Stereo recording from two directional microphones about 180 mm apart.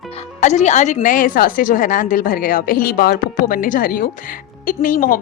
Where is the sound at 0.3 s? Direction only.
40° left (ahead or behind).